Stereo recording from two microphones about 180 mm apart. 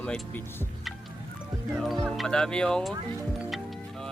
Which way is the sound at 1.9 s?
Centre (ahead or behind).